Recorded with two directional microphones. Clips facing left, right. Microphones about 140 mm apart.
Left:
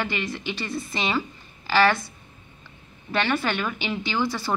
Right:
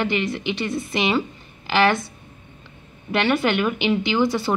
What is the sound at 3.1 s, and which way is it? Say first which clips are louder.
Speech: right 5 dB; 15° right (ahead or behind).